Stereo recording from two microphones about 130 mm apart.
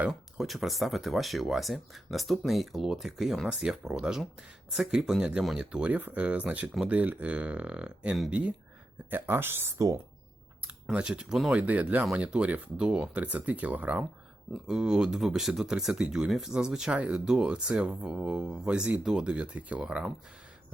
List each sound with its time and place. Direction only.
0.0 s speech: centre (ahead or behind); by 10.0 s 25° right (ahead or behind)
10.8 s speech: 5° right (ahead or behind)